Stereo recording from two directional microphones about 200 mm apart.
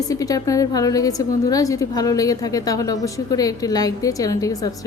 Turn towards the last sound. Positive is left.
turn(degrees=20)  # may be behind; listen again after turning